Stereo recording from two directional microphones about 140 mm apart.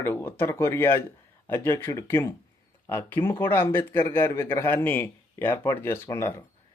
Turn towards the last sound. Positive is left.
turn(degrees=20)  # may be behind; listen again after turning